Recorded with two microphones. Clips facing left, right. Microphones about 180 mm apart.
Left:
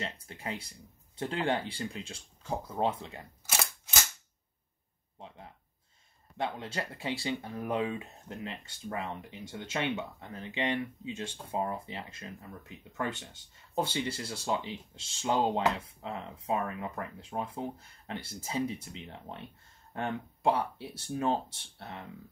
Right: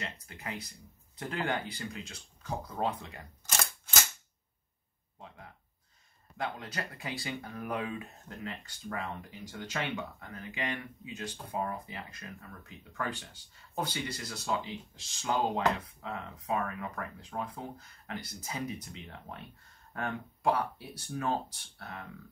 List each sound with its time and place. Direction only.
0.0 s speech: 30° left (ahead or behind)
6.3 s speech: 25° left (ahead or behind)